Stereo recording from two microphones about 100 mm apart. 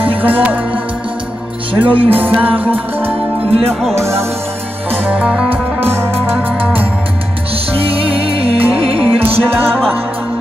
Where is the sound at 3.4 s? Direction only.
75° right (ahead or behind).